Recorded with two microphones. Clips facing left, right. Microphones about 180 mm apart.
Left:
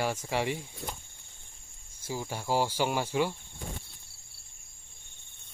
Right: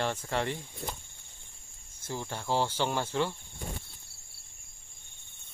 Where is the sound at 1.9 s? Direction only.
10° left (ahead or behind).